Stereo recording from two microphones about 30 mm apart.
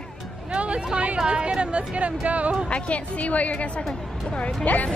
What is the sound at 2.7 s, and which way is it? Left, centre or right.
A woman's voice, left.